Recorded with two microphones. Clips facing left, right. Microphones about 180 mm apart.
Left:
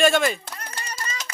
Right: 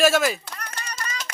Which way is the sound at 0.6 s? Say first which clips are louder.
Even; 25° left (ahead or behind).